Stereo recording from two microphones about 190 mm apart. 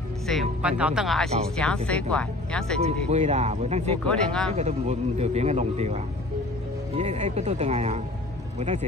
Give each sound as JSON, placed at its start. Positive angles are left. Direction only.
{"t": 0.3, "sound": "speech", "side_deg": -5}
{"t": 2.8, "sound": "speech", "side_deg": -35}
{"t": 4.1, "sound": "speech", "side_deg": 5}
{"t": 4.6, "sound": "speech", "side_deg": -35}